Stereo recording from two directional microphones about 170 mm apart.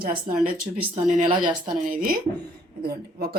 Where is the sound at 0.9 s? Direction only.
45° right (ahead or behind).